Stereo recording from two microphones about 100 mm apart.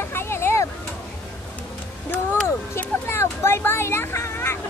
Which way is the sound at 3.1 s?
25° left (ahead or behind).